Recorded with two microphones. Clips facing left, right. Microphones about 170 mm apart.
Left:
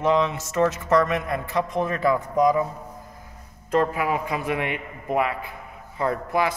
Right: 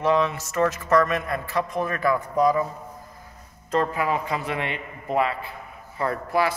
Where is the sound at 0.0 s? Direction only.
20° left (ahead or behind).